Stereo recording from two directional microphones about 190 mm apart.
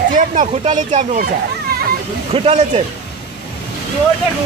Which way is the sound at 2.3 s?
30° right (ahead or behind).